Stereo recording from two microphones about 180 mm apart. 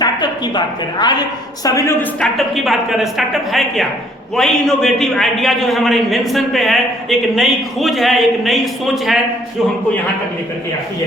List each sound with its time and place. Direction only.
0.0 s a woman's voice: 25° left (ahead or behind)
2.3 s a man's voice: centre (ahead or behind)